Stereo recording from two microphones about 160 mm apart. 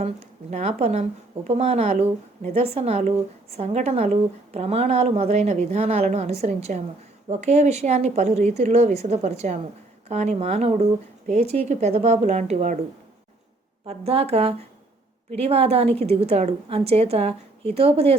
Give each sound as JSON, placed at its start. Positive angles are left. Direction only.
{"t": 0.5, "sound": "a woman's voice", "side_deg": -40}
{"t": 13.8, "sound": "a woman's voice", "side_deg": -40}